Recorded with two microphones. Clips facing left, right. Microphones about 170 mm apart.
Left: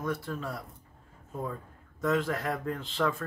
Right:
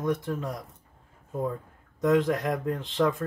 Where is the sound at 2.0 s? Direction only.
20° right (ahead or behind).